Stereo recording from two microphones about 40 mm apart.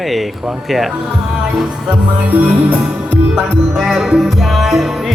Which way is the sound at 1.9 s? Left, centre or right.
Right.